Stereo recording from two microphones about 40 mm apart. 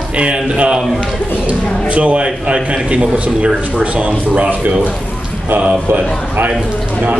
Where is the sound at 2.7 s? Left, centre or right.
Right.